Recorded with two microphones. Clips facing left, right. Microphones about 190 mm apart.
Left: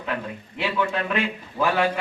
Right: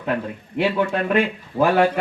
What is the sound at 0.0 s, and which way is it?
A man's voice, 45° right (ahead or behind).